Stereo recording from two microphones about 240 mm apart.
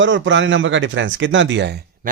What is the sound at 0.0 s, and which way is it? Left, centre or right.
Speech, right.